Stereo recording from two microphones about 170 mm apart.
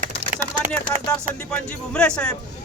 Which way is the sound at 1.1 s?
5° left (ahead or behind).